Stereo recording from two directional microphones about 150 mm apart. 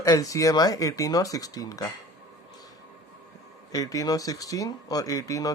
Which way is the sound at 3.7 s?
25° left (ahead or behind).